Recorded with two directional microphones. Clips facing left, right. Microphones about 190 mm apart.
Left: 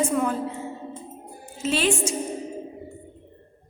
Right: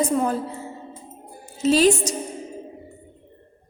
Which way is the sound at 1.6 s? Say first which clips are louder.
Right 6 dB; 40° right (ahead or behind).